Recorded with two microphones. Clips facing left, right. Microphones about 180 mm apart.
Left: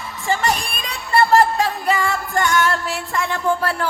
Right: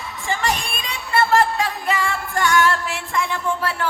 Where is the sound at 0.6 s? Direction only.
Centre (ahead or behind).